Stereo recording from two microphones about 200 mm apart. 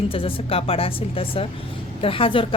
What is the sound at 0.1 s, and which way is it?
A woman's voice, 25° left (ahead or behind).